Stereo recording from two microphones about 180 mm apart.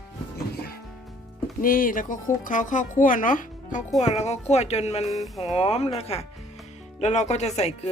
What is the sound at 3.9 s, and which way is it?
A woman's voice, 40° left (ahead or behind).